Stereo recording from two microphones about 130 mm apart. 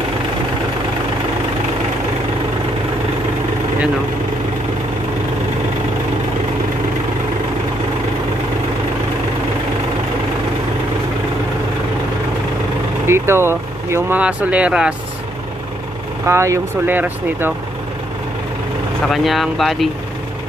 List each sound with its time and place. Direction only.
13.0 s speech: 20° right (ahead or behind)
16.3 s speech: 20° right (ahead or behind)
19.0 s speech: centre (ahead or behind)